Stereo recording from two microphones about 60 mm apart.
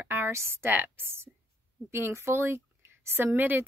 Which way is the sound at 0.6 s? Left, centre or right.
Right.